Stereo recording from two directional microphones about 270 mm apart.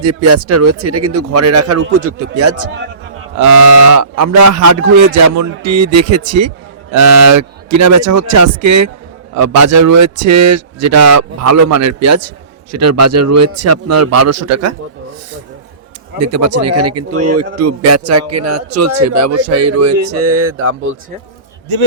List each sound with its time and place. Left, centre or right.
0.0 s a man's voice: right
3.3 s speech: right
6.9 s a man's voice: right
16.2 s a man's voice: right